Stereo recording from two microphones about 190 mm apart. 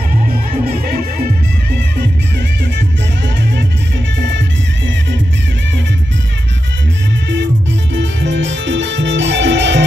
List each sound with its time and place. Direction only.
0.3 s music: 50° right (ahead or behind)
7.9 s music: 70° right (ahead or behind)